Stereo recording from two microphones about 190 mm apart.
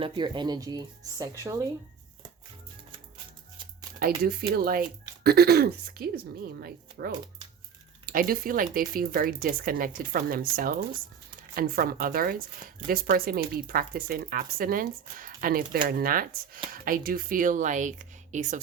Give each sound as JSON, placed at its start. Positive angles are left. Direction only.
{"t": 0.0, "sound": "speech", "side_deg": -25}
{"t": 4.0, "sound": "a woman's voice", "side_deg": -50}